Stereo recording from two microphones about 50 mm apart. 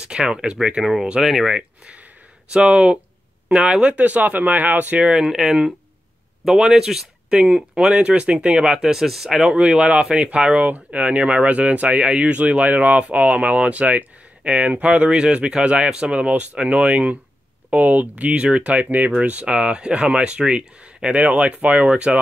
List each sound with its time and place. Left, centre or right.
0.0 s speech: centre
1.2 s speech: centre
1.5 s speech: centre
3.9 s speech: right
5.1 s speech: centre
9.6 s speech: centre
21.8 s speech: right